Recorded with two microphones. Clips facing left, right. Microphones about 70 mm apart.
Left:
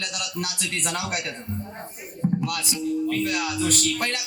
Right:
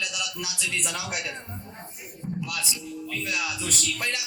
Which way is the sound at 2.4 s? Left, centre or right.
Left.